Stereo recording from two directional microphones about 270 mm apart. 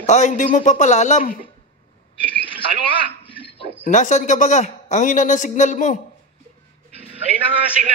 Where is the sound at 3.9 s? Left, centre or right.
Left.